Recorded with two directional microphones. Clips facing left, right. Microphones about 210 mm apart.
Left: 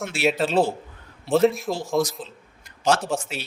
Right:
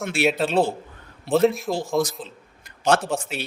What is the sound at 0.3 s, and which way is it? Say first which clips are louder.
Speech: left 1 dB; centre (ahead or behind).